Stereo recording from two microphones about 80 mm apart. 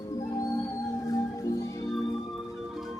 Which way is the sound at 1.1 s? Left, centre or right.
Left.